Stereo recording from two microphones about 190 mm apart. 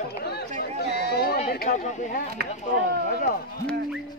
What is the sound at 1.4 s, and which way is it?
Speech, 55° left (ahead or behind).